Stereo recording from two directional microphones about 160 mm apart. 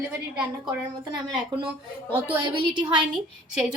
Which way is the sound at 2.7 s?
30° right (ahead or behind).